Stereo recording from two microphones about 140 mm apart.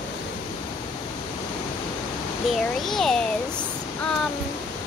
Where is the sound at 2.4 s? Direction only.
Centre (ahead or behind).